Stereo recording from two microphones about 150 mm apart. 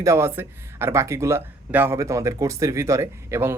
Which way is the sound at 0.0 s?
20° right (ahead or behind).